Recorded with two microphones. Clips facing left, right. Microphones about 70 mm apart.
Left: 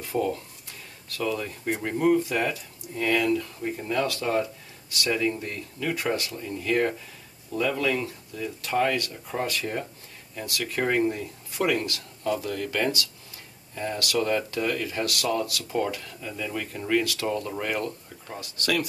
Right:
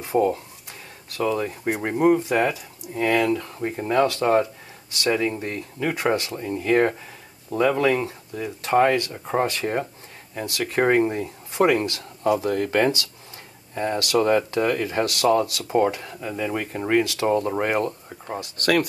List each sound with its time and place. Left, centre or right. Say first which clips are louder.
0.0 s speech: right 6 dB; right
18.6 s speech: right 6 dB; right